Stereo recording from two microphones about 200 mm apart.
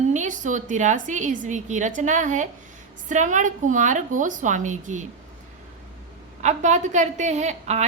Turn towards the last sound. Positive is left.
turn(degrees=-35)  # may be behind; listen again after turning